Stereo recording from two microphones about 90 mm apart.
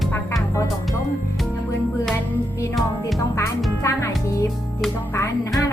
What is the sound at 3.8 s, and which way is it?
Music, 35° left (ahead or behind).